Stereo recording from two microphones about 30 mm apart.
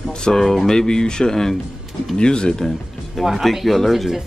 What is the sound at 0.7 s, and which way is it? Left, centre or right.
Speech, left.